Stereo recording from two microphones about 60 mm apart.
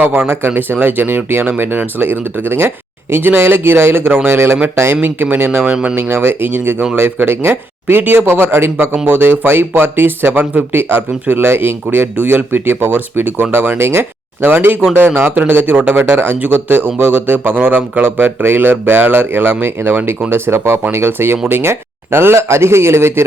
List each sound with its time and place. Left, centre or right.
0.3 s a man's voice: right
5.0 s speech: right
5.7 s speech: centre
6.0 s a man's voice: right